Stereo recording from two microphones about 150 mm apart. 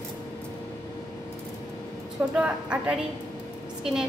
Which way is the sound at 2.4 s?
5° right (ahead or behind).